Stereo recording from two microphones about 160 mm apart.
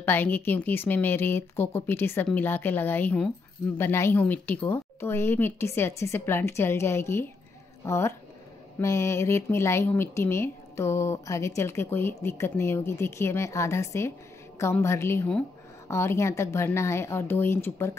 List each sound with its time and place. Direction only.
0.0 s speech: 10° left (ahead or behind)